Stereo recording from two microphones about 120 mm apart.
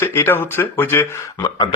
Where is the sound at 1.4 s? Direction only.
35° left (ahead or behind).